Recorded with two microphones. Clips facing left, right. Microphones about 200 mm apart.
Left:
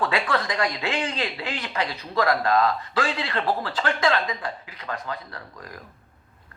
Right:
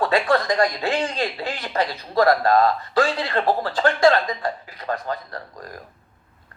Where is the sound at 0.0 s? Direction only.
40° right (ahead or behind).